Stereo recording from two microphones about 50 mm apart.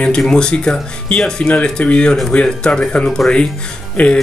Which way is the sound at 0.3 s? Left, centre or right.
Centre.